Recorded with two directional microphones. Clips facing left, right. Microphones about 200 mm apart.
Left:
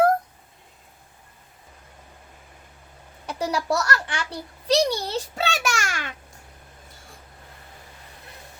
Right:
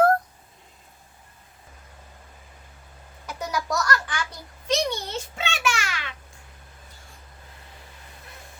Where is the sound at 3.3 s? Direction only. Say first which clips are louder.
Left 4 dB; 30° left (ahead or behind).